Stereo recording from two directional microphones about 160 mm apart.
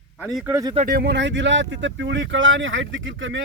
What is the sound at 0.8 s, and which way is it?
Speech, 85° right.